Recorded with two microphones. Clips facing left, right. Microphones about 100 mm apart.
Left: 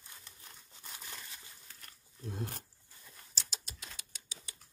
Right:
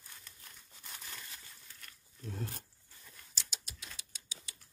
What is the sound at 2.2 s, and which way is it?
Speech, 20° left (ahead or behind).